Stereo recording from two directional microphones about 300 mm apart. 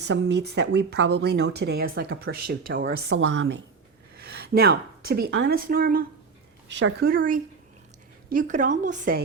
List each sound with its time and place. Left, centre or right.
0.0 s speech: right
4.2 s a sound: right
5.2 s a woman's voice: right